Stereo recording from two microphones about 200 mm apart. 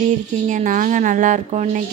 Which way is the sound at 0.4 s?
40° right (ahead or behind).